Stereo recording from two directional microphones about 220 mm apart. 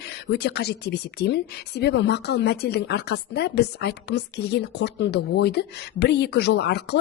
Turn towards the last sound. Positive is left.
turn(degrees=50)  # may be behind; listen again after turning